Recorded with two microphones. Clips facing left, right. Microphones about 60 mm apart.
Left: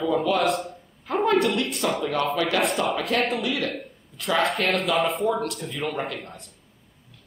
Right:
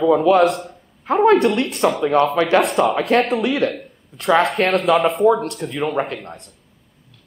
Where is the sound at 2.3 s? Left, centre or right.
Right.